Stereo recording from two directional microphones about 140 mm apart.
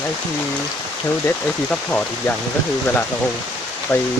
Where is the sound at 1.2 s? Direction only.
10° left (ahead or behind).